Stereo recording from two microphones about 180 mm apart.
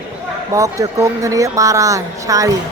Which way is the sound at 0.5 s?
15° right (ahead or behind).